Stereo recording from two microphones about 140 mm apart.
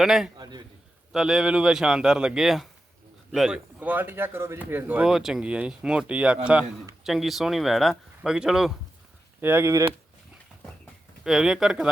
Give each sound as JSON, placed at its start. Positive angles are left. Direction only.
{"t": 0.0, "sound": "speech", "side_deg": 0}
{"t": 0.3, "sound": "a sound", "side_deg": -30}
{"t": 1.1, "sound": "speech", "side_deg": -5}
{"t": 9.4, "sound": "speech", "side_deg": -15}
{"t": 11.2, "sound": "speech", "side_deg": 0}